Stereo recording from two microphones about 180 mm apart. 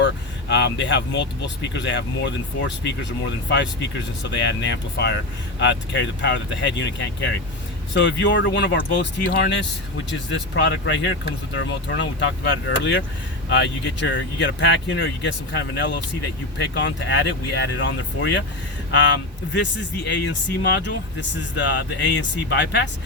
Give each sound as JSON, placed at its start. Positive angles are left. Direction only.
{"t": 0.0, "sound": "speech", "side_deg": 75}
{"t": 4.2, "sound": "speech", "side_deg": 75}
{"t": 10.5, "sound": "speech", "side_deg": 85}